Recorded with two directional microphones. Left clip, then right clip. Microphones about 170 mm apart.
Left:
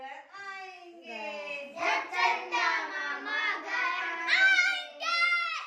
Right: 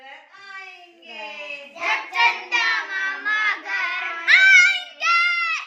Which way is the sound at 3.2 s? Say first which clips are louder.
Right 10 dB; 25° right (ahead or behind).